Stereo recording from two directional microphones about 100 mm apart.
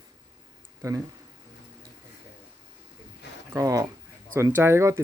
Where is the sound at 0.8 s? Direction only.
30° right (ahead or behind).